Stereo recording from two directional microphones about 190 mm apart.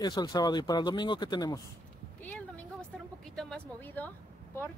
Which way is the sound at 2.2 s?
5° left (ahead or behind).